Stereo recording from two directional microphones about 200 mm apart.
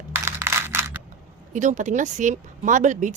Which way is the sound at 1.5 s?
35° right (ahead or behind).